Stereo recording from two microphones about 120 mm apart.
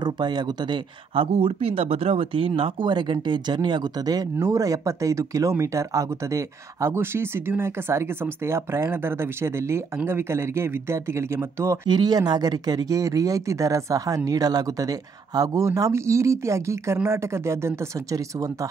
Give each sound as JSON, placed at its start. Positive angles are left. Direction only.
{"t": 0.0, "sound": "speech", "side_deg": -40}
{"t": 1.1, "sound": "speech", "side_deg": -55}
{"t": 11.9, "sound": "speech", "side_deg": -35}